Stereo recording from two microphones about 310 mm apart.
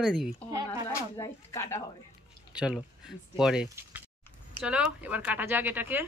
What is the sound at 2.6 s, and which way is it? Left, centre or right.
Speech, centre.